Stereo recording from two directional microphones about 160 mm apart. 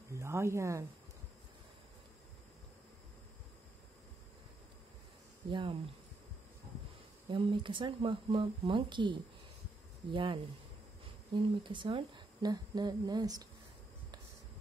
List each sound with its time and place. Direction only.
0.1 s speech: 15° right (ahead or behind)
5.5 s speech: 30° right (ahead or behind)
7.2 s speech: 35° right (ahead or behind)
10.1 s speech: 30° right (ahead or behind)